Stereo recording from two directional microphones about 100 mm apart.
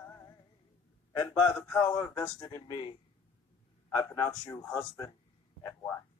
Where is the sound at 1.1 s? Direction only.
30° left (ahead or behind).